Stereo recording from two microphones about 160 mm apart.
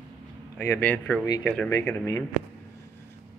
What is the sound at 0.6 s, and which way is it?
Speech, 15° left (ahead or behind).